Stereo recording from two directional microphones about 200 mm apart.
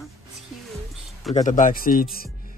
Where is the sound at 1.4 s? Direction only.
40° left (ahead or behind).